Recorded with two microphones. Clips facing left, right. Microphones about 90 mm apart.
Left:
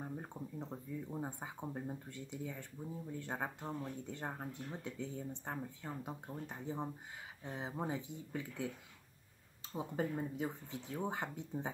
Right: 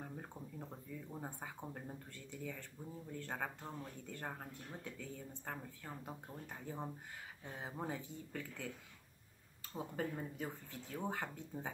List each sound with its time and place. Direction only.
0.0 s speech: 15° left (ahead or behind)
9.8 s speech: 20° left (ahead or behind)